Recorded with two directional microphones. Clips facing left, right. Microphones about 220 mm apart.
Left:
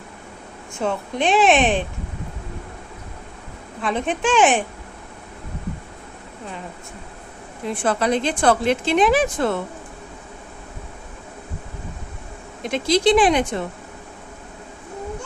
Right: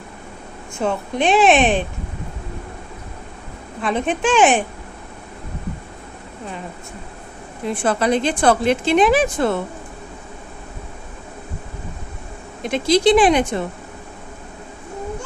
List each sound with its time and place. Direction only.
0.8 s a woman's voice: 10° right (ahead or behind)
3.8 s a woman's voice: 5° right (ahead or behind)
7.8 s a woman's voice: 5° right (ahead or behind)
12.6 s a woman's voice: 5° right (ahead or behind)